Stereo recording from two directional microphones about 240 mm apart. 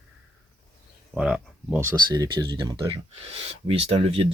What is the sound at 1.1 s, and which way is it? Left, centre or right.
Speech, centre.